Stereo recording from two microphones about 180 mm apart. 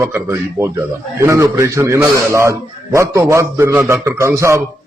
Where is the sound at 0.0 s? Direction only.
15° right (ahead or behind).